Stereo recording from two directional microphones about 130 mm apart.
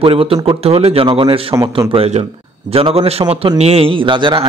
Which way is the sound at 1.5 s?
30° right (ahead or behind).